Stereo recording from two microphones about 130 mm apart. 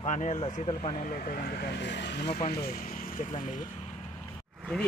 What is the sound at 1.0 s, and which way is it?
Speech, 90° left.